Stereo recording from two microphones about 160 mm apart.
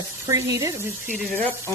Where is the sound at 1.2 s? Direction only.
10° left (ahead or behind).